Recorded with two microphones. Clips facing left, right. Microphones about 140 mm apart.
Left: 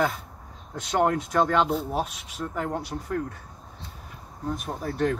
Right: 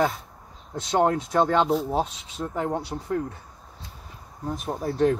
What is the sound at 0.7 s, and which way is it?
Speech, 30° right (ahead or behind).